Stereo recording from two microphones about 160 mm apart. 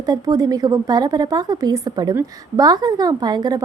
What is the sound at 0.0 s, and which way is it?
A woman's voice, 25° right (ahead or behind).